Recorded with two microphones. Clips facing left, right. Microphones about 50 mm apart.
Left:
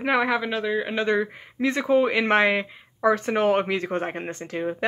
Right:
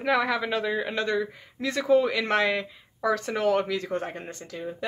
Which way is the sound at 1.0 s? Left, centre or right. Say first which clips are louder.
Left 4 dB; left.